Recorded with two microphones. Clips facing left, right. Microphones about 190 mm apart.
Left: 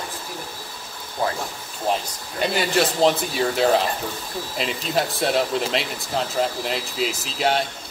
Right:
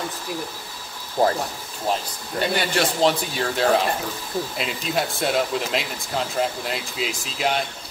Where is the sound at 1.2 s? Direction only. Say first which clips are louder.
Right 5 dB; 45° right (ahead or behind).